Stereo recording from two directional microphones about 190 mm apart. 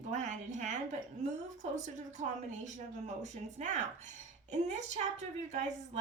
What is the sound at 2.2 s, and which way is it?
A woman's voice, 40° right (ahead or behind).